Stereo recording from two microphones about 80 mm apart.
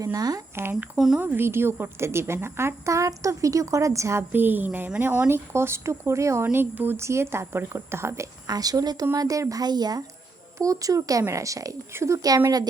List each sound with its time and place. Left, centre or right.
0.0 s a woman's voice: right
0.5 s a woman's voice: right
0.9 s speech: centre
1.2 s a woman's voice: right
4.2 s a woman's voice: right
8.4 s a woman's voice: right
10.6 s a woman's voice: right